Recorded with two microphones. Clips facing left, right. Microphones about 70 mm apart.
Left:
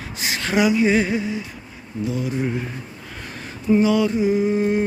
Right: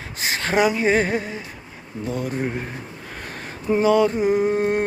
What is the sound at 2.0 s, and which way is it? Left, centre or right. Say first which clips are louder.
Humming: left 1 dB; right.